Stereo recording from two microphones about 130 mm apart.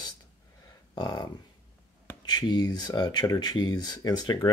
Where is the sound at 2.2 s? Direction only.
35° left (ahead or behind).